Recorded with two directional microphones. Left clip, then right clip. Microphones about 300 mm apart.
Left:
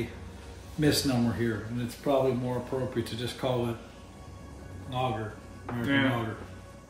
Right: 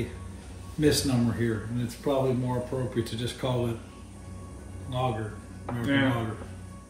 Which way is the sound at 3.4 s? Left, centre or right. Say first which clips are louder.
Left 1 dB; centre.